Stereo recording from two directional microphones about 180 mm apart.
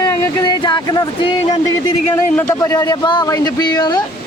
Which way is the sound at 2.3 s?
15° left (ahead or behind).